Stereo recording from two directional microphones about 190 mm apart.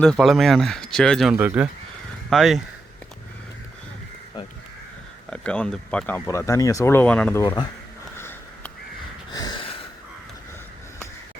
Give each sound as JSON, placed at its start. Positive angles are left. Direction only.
{"t": 0.0, "sound": "speech", "side_deg": 0}
{"t": 5.3, "sound": "speech", "side_deg": 5}
{"t": 8.1, "sound": "sniff", "side_deg": 10}
{"t": 9.3, "sound": "snort", "side_deg": 20}